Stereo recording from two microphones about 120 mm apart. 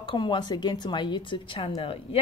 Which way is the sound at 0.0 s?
40° left (ahead or behind).